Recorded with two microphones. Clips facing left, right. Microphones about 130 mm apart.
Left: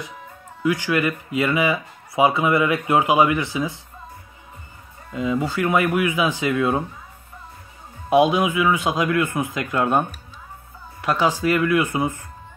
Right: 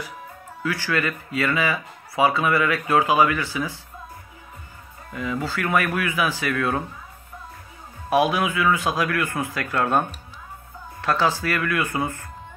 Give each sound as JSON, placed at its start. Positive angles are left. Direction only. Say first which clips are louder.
{"t": 0.6, "sound": "speech", "louder": "left 4 dB", "side_deg": 15}
{"t": 5.1, "sound": "speech", "louder": "left 4 dB", "side_deg": 20}
{"t": 8.1, "sound": "speech", "louder": "left 4 dB", "side_deg": 20}